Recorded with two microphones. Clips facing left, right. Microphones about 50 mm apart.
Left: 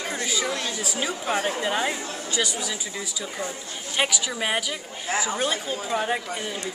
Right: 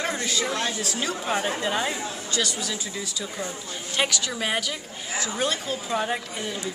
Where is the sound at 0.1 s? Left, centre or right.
Centre.